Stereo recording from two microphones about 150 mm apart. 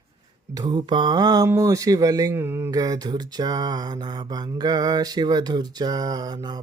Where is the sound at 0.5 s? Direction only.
30° right (ahead or behind).